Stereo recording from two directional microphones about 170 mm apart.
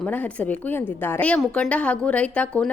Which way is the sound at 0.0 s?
10° left (ahead or behind).